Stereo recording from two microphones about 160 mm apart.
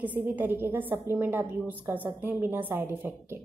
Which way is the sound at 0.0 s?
10° right (ahead or behind).